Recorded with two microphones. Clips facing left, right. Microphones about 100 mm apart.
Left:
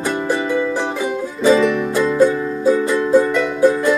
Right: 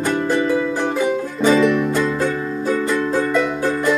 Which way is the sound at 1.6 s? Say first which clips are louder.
Right 1 dB; centre (ahead or behind).